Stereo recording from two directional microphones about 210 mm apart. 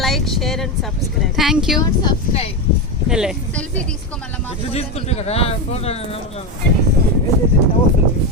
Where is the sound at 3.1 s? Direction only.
5° right (ahead or behind).